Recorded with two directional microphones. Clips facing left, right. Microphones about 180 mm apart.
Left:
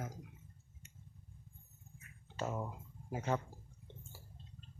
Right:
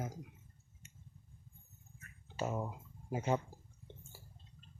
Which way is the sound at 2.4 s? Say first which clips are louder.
Right 2 dB; 10° right (ahead or behind).